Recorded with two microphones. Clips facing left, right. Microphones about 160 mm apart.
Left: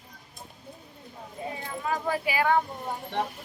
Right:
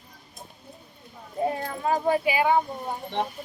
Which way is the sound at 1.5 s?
50° right (ahead or behind).